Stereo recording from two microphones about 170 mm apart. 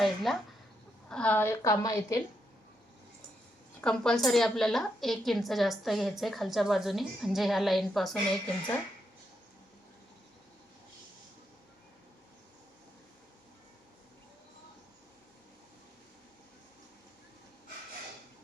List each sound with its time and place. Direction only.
0.0 s a woman's voice: centre (ahead or behind); by 2.2 s 20° left (ahead or behind)
3.8 s a woman's voice: 5° left (ahead or behind)